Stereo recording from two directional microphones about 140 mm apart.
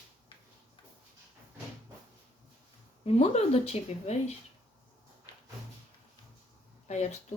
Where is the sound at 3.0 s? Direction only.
50° left (ahead or behind).